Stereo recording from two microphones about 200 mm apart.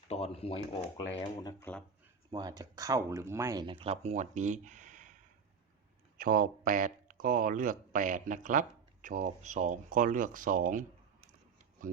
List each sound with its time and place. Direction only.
0.1 s speech: 30° left (ahead or behind)
1.7 s speech: 10° left (ahead or behind)
2.3 s speech: 20° right (ahead or behind); by 5.1 s 40° right (ahead or behind)
6.1 s speech: 45° right (ahead or behind)